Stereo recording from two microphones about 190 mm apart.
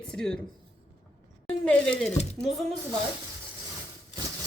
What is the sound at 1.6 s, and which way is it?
Speech, 5° left (ahead or behind).